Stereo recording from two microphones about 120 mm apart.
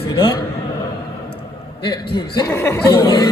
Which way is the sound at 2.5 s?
20° left (ahead or behind).